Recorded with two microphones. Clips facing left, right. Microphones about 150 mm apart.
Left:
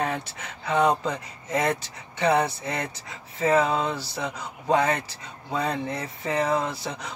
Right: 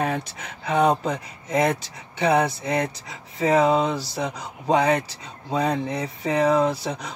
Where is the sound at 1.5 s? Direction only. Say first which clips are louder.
Right 3 dB; 15° right (ahead or behind).